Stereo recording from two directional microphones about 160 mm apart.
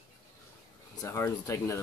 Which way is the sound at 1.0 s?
20° left (ahead or behind).